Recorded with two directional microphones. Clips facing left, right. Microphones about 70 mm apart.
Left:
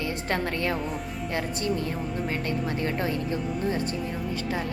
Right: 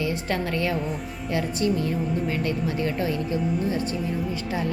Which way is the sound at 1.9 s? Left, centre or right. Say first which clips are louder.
Right 5 dB; centre.